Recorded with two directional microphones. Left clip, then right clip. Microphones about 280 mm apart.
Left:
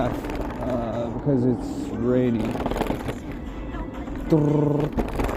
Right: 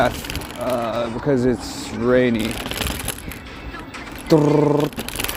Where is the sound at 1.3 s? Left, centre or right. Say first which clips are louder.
Right 4 dB; right.